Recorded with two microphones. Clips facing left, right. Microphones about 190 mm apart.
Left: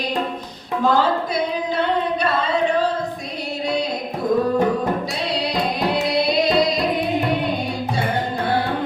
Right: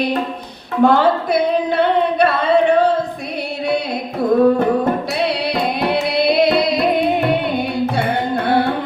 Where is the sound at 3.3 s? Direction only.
60° right (ahead or behind).